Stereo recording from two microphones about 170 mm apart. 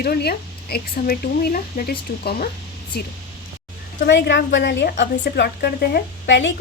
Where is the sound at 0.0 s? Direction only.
65° left (ahead or behind).